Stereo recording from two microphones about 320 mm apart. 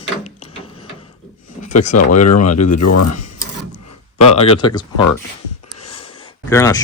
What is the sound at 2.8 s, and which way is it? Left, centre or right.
Speech, left.